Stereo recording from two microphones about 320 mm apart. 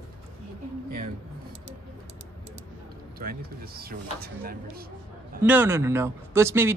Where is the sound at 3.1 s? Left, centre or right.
Right.